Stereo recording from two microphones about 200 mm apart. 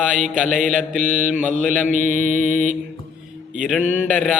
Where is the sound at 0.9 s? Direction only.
40° right (ahead or behind).